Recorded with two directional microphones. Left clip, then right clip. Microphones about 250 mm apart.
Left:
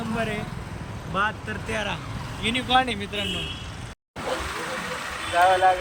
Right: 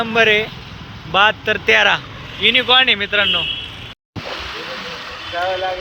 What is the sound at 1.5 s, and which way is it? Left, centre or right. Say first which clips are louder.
Speech: right 16 dB; right.